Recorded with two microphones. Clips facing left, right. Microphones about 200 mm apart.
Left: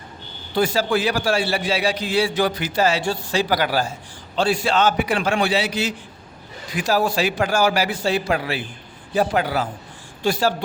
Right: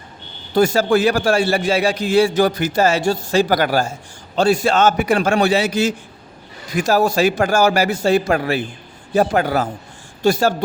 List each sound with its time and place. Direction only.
0.5 s a man's voice: 45° right (ahead or behind)